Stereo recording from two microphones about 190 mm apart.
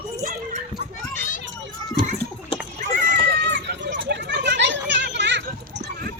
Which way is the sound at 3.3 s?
60° right (ahead or behind).